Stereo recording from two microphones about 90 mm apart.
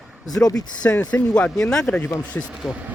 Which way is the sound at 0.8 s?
15° left (ahead or behind).